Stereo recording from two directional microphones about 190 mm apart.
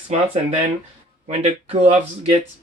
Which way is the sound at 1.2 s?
35° right (ahead or behind).